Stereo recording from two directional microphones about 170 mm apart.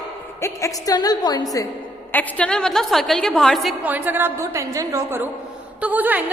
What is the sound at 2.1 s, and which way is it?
A woman's voice, 10° left (ahead or behind).